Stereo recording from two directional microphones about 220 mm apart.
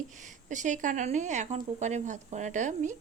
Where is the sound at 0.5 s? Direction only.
35° right (ahead or behind).